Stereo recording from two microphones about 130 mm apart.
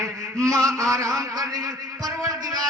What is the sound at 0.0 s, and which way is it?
A man's voice, 25° right (ahead or behind).